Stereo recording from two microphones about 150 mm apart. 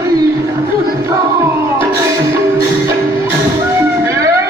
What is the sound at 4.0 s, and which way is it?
Music, 20° right (ahead or behind).